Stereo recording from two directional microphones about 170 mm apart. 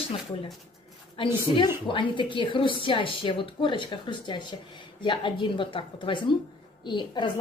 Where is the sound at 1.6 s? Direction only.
30° left (ahead or behind).